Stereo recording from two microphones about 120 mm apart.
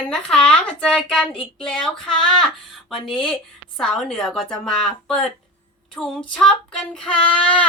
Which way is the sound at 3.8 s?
5° left (ahead or behind).